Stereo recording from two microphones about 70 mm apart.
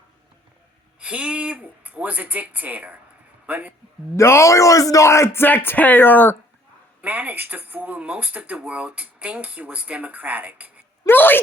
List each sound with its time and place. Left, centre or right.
0.9 s a man's voice: centre
4.2 s speech: left
7.0 s speech: right
11.0 s speech: left